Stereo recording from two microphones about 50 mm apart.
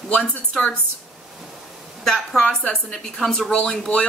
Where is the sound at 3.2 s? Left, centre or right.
Centre.